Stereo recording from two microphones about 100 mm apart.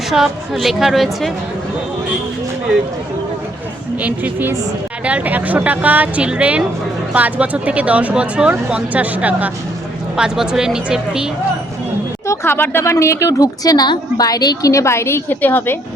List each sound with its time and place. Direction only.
0.1 s a woman's voice: centre (ahead or behind)
4.0 s a woman's voice: 20° right (ahead or behind)
12.3 s a woman's voice: 25° left (ahead or behind)